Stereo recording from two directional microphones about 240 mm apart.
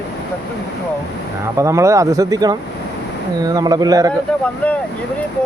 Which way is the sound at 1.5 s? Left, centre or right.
Centre.